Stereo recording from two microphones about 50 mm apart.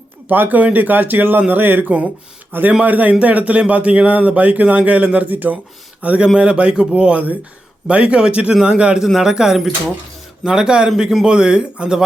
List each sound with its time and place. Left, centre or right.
0.3 s a man's voice: right
6.2 s a man's voice: centre